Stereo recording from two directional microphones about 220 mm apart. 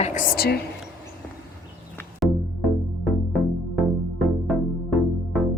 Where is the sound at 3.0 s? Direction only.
Centre (ahead or behind).